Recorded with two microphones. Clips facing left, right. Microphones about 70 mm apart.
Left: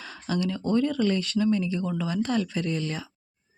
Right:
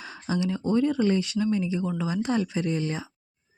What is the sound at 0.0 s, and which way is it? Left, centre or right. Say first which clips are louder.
Speech: even; centre.